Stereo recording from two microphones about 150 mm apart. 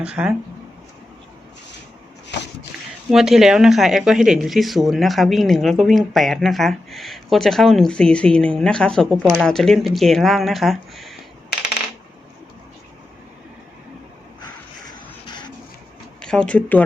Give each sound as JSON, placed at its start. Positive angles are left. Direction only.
{"t": 0.0, "sound": "speech", "side_deg": -5}
{"t": 3.1, "sound": "speech", "side_deg": -5}
{"t": 14.4, "sound": "a sound", "side_deg": 25}
{"t": 16.2, "sound": "speech", "side_deg": 5}